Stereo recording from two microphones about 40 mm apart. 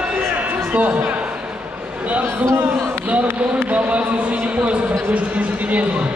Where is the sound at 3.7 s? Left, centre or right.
Right.